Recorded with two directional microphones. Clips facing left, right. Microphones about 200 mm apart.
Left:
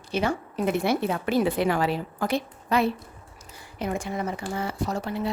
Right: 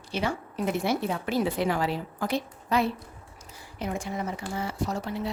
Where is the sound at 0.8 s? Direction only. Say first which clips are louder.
Left 3 dB; 60° left (ahead or behind).